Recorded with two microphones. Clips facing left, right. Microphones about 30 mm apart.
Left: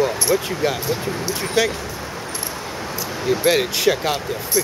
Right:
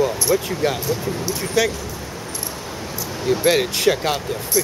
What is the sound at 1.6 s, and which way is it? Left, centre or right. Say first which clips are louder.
Speech: even; centre.